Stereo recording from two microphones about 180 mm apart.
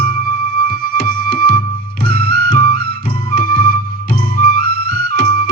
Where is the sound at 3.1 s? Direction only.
50° left (ahead or behind).